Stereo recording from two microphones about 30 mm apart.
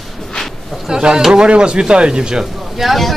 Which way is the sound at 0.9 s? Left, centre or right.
Right.